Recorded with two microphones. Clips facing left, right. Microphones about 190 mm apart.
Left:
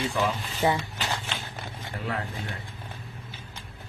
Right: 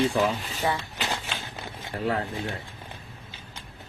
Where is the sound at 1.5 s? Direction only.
30° right (ahead or behind).